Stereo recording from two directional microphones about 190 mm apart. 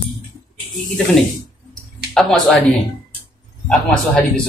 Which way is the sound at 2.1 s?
Centre (ahead or behind).